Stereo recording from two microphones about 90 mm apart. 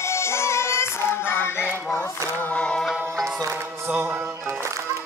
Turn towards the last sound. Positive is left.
turn(degrees=-20)  # may be behind; listen again after turning